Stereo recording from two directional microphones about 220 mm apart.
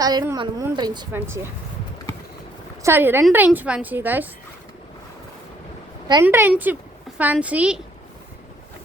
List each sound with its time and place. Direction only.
0.0 s a woman's voice: 15° right (ahead or behind)
2.8 s a woman's voice: 10° right (ahead or behind)
6.2 s a woman's voice: 10° right (ahead or behind)